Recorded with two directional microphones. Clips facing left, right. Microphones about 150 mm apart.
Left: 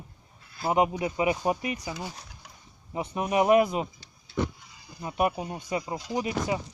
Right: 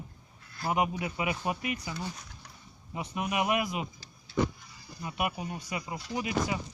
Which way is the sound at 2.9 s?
30° left (ahead or behind).